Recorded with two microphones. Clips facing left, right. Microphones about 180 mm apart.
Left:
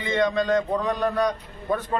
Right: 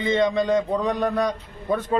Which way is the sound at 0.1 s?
20° right (ahead or behind).